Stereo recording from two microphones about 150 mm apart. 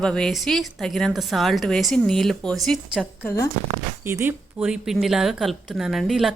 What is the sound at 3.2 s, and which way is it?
Speech, 15° left (ahead or behind).